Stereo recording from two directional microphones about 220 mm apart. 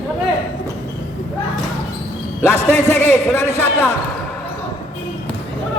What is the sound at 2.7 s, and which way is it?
Speech, 10° left (ahead or behind).